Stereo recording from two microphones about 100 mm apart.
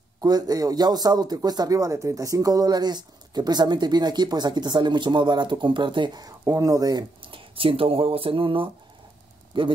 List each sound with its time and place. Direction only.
0.2 s a man's voice: 40° right (ahead or behind)
7.2 s speech: 60° right (ahead or behind)